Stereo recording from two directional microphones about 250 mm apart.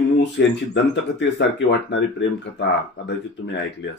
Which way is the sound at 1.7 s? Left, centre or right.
Left.